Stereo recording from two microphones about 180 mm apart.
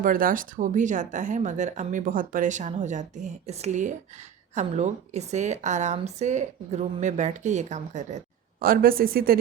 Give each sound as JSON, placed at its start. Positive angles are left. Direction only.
{"t": 0.0, "sound": "a woman's voice", "side_deg": -50}
{"t": 8.6, "sound": "speech", "side_deg": -55}